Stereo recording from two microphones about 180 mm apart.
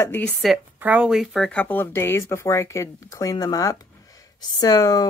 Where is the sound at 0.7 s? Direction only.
10° right (ahead or behind).